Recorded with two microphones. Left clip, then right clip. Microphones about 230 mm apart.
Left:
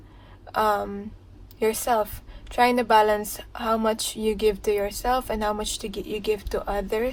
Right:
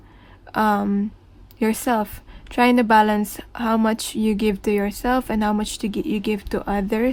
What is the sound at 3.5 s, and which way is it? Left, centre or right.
Speech, right.